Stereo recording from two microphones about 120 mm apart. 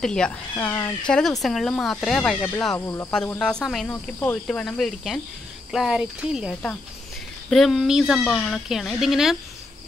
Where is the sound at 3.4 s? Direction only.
5° left (ahead or behind).